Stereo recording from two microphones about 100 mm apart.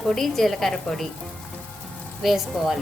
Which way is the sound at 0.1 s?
Centre (ahead or behind).